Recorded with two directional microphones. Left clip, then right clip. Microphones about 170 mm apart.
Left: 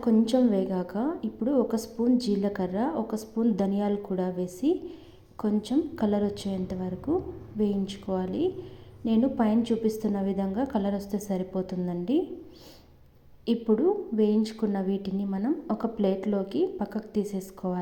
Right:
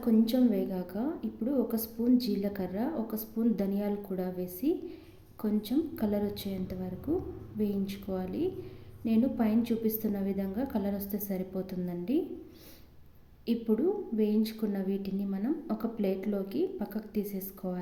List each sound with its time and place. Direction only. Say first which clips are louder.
0.0 s a woman's voice: left 4 dB; 10° left (ahead or behind)
13.4 s a woman's voice: left 5 dB; 10° left (ahead or behind)